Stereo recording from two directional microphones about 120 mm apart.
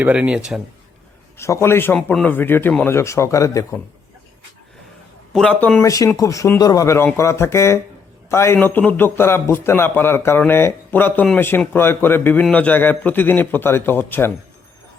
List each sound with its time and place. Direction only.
0.0 s speech: 10° right (ahead or behind)
1.4 s a man's voice: 25° left (ahead or behind)
5.3 s a man's voice: 5° left (ahead or behind)
5.8 s a man's voice: 30° left (ahead or behind)